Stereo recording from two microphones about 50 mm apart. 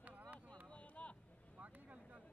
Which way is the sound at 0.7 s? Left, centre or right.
Left.